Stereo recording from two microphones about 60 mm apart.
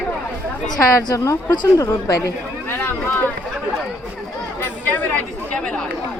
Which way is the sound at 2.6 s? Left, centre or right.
Left.